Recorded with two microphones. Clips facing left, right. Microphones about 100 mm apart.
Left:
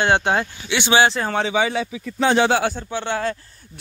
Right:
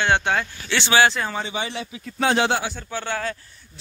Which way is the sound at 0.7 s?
15° left (ahead or behind).